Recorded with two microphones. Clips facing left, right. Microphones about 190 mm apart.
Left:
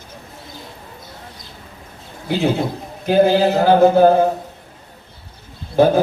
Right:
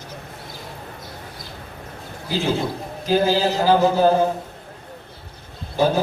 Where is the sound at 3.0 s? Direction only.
60° left (ahead or behind).